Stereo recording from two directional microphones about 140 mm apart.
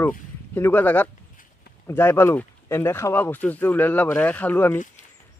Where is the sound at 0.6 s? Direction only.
15° left (ahead or behind).